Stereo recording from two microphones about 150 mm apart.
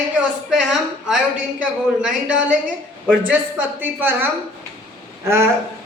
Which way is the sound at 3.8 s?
15° right (ahead or behind).